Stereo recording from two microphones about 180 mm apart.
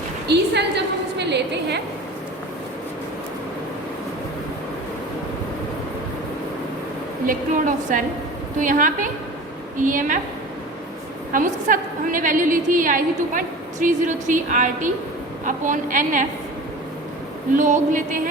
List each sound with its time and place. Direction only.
0.3 s a woman's voice: 70° right (ahead or behind)
7.3 s a woman's voice: 45° right (ahead or behind)
11.3 s a woman's voice: 50° right (ahead or behind)
17.6 s a woman's voice: 45° right (ahead or behind)